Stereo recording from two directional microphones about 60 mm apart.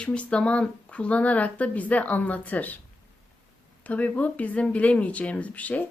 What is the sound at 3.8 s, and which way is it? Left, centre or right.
Speech, left.